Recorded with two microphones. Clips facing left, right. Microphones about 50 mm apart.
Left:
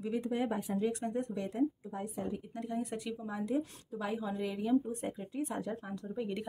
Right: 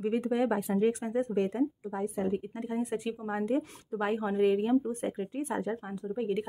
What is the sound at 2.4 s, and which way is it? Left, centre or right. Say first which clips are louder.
Speech: right 4 dB; right.